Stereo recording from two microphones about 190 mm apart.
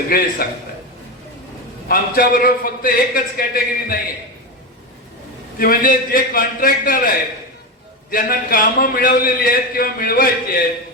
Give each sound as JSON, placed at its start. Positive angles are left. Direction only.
{"t": 0.1, "sound": "a man's voice", "side_deg": 50}
{"t": 1.9, "sound": "a man's voice", "side_deg": 50}
{"t": 5.5, "sound": "a man's voice", "side_deg": 50}
{"t": 8.1, "sound": "a man's voice", "side_deg": 50}